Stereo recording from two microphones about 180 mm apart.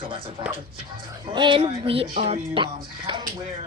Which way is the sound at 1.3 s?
25° right (ahead or behind).